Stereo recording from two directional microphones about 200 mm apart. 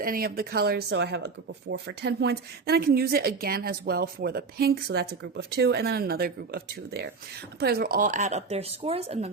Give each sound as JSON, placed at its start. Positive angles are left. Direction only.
{"t": 0.0, "sound": "speech", "side_deg": -45}